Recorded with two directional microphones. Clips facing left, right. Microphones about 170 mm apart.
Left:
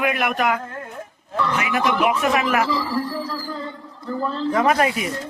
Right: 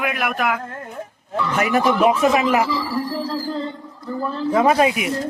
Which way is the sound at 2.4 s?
20° right (ahead or behind).